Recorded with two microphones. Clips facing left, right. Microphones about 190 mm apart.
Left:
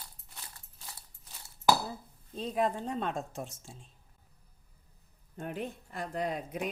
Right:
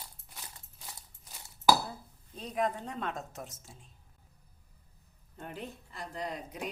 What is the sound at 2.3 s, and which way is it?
A woman's voice, 30° left (ahead or behind).